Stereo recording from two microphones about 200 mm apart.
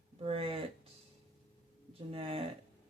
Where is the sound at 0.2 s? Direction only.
30° right (ahead or behind).